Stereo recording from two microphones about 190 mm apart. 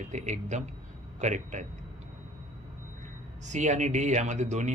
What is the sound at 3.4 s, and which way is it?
A man's voice, 40° right (ahead or behind).